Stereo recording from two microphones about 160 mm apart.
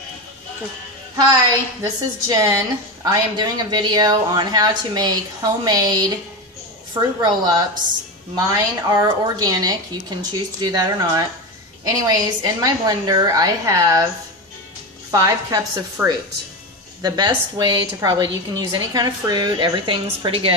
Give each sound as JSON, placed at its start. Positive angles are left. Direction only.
{"t": 1.1, "sound": "a woman's voice", "side_deg": -20}
{"t": 15.0, "sound": "a woman's voice", "side_deg": -25}